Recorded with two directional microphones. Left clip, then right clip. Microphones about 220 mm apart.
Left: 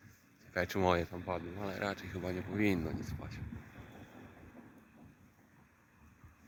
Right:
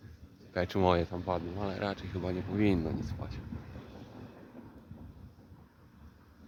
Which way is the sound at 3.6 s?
50° right (ahead or behind).